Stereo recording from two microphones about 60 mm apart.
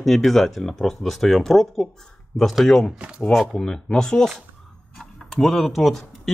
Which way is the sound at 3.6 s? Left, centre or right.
Centre.